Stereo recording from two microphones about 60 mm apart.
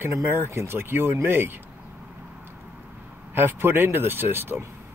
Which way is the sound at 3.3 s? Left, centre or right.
Right.